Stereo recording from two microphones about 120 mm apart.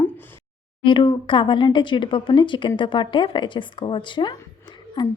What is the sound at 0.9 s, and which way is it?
A woman's voice, 45° left (ahead or behind).